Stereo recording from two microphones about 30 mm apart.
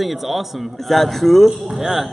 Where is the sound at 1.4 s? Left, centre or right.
Centre.